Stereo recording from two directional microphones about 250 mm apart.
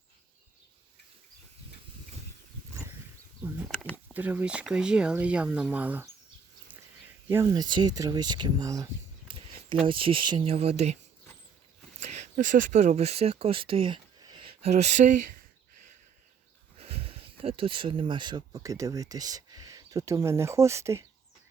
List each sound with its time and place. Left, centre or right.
3.7 s a sound: centre
3.9 s speech: centre
7.3 s speech: centre
11.9 s speech: right
16.8 s speech: right